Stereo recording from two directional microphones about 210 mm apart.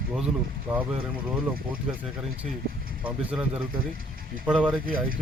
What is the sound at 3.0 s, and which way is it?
Speech, 5° right (ahead or behind).